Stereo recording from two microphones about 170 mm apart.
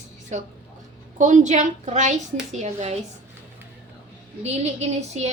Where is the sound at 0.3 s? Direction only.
45° right (ahead or behind).